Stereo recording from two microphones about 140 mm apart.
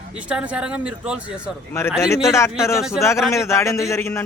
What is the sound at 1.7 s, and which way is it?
Speech, 20° left (ahead or behind).